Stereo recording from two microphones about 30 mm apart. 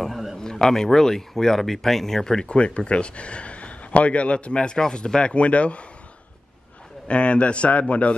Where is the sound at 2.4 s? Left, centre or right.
Left.